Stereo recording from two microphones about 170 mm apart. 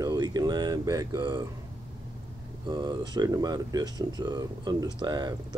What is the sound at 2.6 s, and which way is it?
Speech, 25° right (ahead or behind).